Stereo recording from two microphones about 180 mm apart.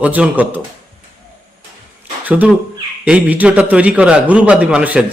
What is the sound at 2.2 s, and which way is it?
A man's voice, 10° right (ahead or behind).